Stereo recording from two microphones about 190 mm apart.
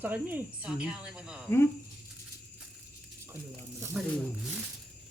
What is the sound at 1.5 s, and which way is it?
Speech, 10° left (ahead or behind).